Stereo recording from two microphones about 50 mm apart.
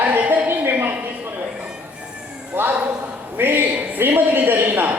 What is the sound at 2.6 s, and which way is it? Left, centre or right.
A man's voice, right.